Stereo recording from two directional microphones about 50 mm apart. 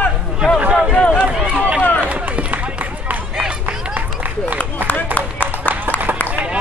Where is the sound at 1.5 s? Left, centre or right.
Right.